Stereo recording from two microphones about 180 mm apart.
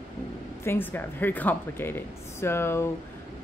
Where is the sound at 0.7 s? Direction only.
10° left (ahead or behind).